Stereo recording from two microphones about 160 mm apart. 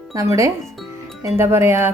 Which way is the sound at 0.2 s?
20° right (ahead or behind).